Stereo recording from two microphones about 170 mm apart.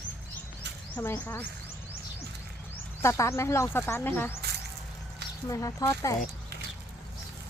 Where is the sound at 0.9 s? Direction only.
10° left (ahead or behind).